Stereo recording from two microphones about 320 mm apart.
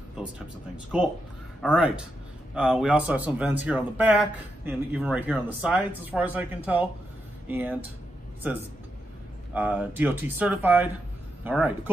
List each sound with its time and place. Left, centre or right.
1.6 s speech: centre
9.5 s speech: centre